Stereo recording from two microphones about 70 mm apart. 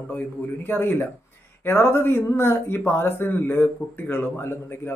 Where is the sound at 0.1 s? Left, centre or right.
Left.